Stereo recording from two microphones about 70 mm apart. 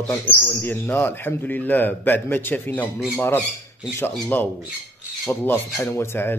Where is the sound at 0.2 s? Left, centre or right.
Left.